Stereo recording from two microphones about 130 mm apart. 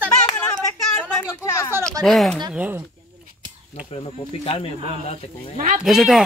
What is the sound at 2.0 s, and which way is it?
Speech, centre (ahead or behind).